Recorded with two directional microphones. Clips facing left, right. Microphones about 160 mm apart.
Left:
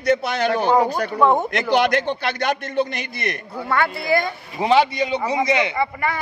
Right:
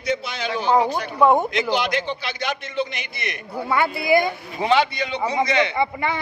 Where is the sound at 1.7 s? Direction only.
55° left (ahead or behind).